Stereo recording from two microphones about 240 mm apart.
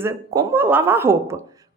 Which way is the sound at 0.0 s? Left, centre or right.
Centre.